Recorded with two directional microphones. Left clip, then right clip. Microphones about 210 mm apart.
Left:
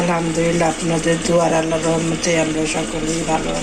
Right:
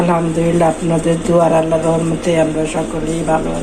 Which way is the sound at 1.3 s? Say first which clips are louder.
Right 6 dB; 5° right (ahead or behind).